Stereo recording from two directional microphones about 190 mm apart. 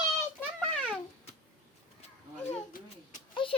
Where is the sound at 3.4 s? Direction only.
25° left (ahead or behind).